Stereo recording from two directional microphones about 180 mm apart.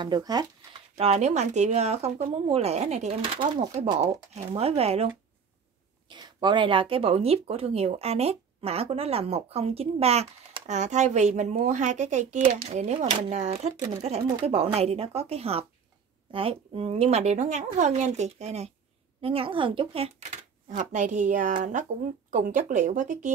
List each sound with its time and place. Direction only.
0.0 s speech: 25° right (ahead or behind)
0.9 s speech: 35° right (ahead or behind)
6.0 s speech: 25° right (ahead or behind); by 23.3 s 45° right (ahead or behind)